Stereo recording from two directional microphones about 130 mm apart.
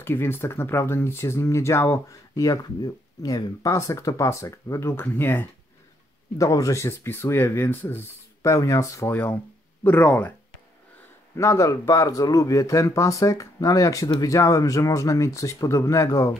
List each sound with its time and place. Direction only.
0.0 s speech: 15° left (ahead or behind)
9.1 s speech: 15° left (ahead or behind)
11.3 s speech: 25° left (ahead or behind)